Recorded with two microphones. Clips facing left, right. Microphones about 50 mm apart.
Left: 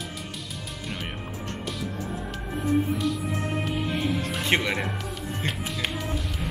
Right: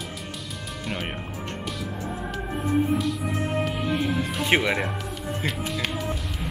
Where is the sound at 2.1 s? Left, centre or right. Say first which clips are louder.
Right 2 dB; centre.